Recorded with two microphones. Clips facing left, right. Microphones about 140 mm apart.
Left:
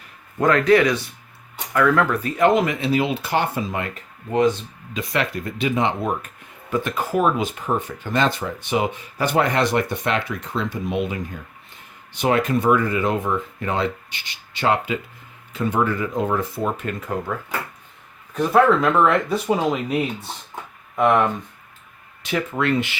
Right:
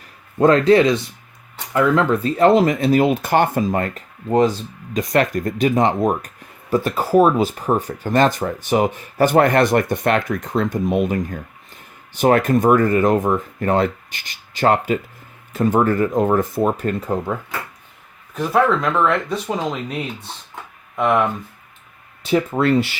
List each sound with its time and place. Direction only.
0.3 s speech: 30° right (ahead or behind)
18.3 s speech: centre (ahead or behind)
22.2 s speech: 30° right (ahead or behind)